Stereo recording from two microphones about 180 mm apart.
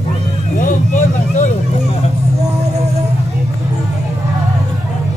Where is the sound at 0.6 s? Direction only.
45° left (ahead or behind).